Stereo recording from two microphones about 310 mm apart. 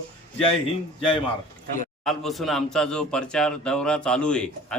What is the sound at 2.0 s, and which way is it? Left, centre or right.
Speech, centre.